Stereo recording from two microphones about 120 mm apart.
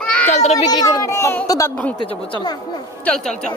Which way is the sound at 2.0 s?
40° left (ahead or behind).